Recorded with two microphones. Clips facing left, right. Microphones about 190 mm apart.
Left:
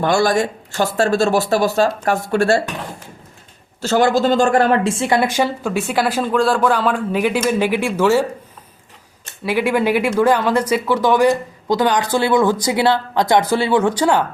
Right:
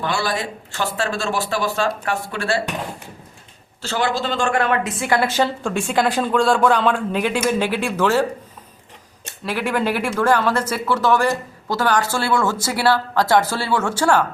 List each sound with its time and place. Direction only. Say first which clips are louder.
0.0 s speech: left 8 dB; 45° left (ahead or behind)
3.8 s a woman's voice: left 7 dB; 45° left (ahead or behind); by 8.2 s 10° left (ahead or behind)
9.4 s a woman's voice: left 4 dB; 10° left (ahead or behind)